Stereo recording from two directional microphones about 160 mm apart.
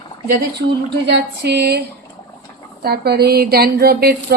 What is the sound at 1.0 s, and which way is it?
Speech, 90° right.